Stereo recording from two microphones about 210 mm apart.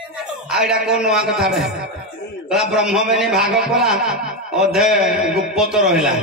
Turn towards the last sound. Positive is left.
turn(degrees=-5)  # may be behind; listen again after turning